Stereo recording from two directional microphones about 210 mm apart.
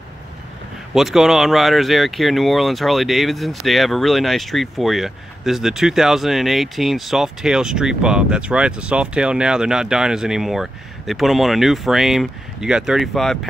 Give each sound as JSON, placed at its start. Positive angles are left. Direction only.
{"t": 0.9, "sound": "speech", "side_deg": 0}